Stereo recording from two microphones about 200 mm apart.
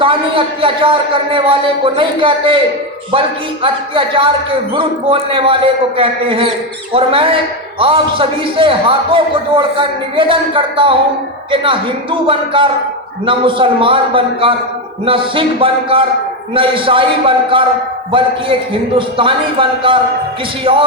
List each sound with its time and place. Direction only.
0.0 s speech: 25° right (ahead or behind)